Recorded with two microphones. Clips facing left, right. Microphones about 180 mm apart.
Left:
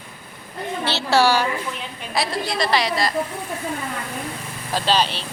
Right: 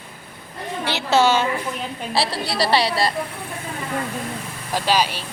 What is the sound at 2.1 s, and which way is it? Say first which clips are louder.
A woman's voice: even; 35° right (ahead or behind).